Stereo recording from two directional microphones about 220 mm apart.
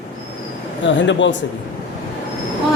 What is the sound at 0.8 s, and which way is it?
Speech, 55° left (ahead or behind).